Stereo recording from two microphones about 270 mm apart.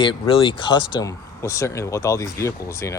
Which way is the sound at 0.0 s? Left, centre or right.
Centre.